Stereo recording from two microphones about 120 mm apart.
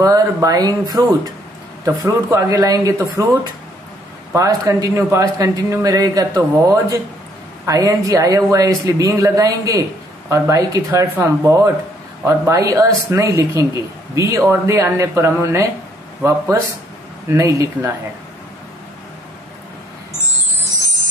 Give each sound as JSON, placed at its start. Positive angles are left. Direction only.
{"t": 0.0, "sound": "a man's voice", "side_deg": -30}
{"t": 4.3, "sound": "a man's voice", "side_deg": -25}